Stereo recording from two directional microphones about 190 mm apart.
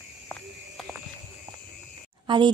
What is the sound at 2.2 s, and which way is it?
Speech, 25° right (ahead or behind).